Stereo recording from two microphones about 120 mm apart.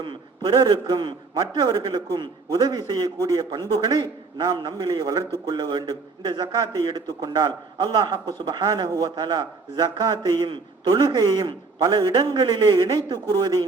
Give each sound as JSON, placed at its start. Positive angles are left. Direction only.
{"t": 0.0, "sound": "a man's voice", "side_deg": -40}